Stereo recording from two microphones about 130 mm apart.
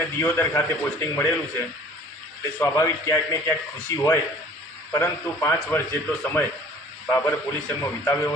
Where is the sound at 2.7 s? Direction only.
25° left (ahead or behind).